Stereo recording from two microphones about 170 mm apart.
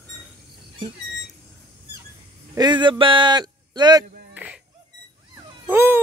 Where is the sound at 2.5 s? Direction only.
25° right (ahead or behind).